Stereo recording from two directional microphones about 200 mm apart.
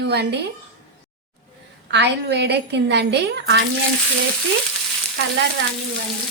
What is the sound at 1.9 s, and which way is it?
A woman's voice, 60° right (ahead or behind).